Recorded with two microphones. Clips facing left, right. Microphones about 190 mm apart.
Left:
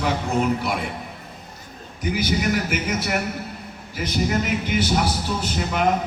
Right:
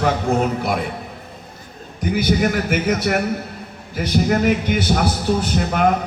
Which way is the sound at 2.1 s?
55° right (ahead or behind).